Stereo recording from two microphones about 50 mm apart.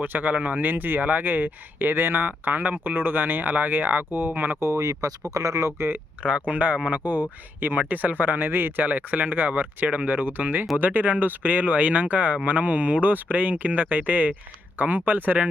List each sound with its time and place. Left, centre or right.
0.0 s speech: right
4.6 s speech: right
6.5 s speech: right